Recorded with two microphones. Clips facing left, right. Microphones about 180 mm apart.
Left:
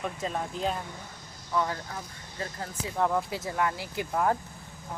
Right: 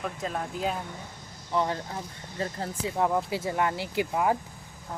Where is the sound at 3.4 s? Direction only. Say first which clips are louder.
Right 2 dB; 25° right (ahead or behind).